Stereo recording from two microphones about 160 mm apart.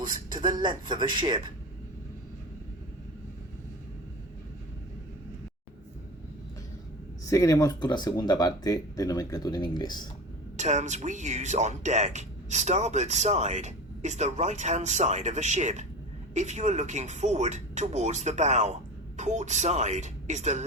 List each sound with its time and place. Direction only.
0.0 s a man's voice: 25° right (ahead or behind)
7.3 s speech: 20° left (ahead or behind)
10.6 s speech: 45° right (ahead or behind)